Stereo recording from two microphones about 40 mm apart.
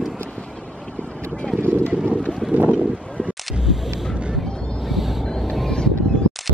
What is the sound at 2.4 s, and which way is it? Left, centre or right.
Boat, centre.